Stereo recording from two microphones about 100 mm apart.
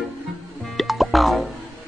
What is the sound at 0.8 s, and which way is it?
Music, centre (ahead or behind).